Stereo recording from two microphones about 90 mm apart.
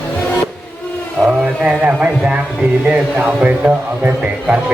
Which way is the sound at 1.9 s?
10° right (ahead or behind).